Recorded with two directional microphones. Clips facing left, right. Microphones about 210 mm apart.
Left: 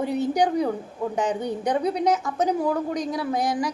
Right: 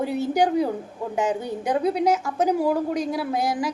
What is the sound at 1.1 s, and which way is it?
A woman's voice, 5° right (ahead or behind).